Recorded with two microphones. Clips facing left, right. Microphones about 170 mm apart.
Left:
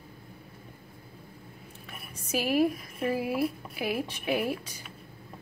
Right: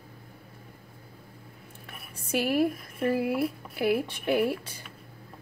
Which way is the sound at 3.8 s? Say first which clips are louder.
Right 5 dB; 60° right (ahead or behind).